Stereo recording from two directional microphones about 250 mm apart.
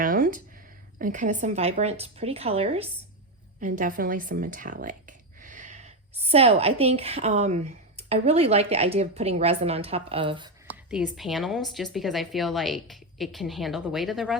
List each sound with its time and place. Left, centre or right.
0.0 s a sound: right
0.9 s a woman's voice: right
10.8 s a woman's voice: centre